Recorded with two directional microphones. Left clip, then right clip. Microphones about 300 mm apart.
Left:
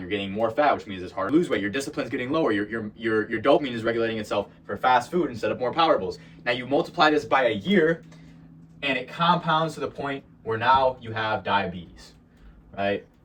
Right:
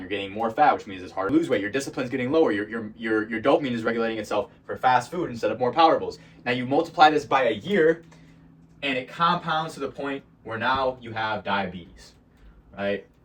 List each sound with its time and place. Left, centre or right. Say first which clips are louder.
0.1 s speech: left 1 dB; centre
8.8 s speech: right 1 dB; centre